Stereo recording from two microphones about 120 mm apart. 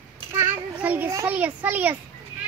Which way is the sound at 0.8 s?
15° right (ahead or behind).